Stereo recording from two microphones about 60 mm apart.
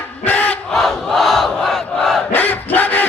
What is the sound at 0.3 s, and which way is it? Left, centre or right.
Battle cry, left.